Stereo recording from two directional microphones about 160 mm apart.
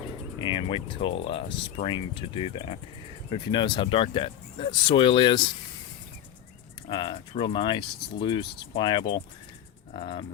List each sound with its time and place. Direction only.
0.3 s speech: 30° left (ahead or behind)
6.8 s speech: 30° left (ahead or behind)